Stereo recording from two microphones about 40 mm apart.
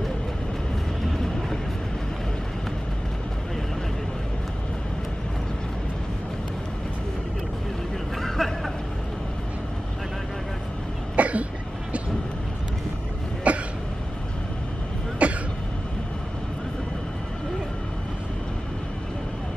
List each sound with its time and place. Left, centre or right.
1.0 s vehicle: centre
8.2 s a sound: centre
11.1 s cough: right
13.5 s cough: right
15.2 s cough: right